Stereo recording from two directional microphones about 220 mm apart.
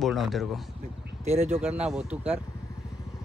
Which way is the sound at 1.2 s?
30° right (ahead or behind).